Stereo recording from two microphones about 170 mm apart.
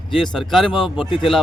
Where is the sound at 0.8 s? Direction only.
5° left (ahead or behind).